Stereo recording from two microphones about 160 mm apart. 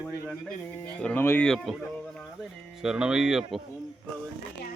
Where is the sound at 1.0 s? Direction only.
10° left (ahead or behind).